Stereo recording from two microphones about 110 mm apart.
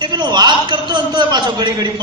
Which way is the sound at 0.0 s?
40° right (ahead or behind).